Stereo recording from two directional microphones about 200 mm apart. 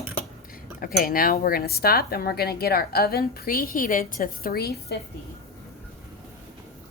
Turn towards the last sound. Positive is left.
turn(degrees=50)  # may be behind; listen again after turning